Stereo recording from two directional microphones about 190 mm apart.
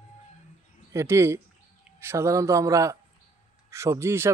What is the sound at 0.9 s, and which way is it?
Speech, 15° right (ahead or behind).